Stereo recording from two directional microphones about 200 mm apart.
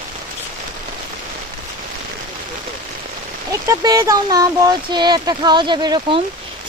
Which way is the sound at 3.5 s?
15° right (ahead or behind).